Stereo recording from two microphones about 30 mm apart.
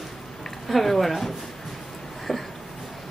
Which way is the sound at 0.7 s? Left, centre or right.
Centre.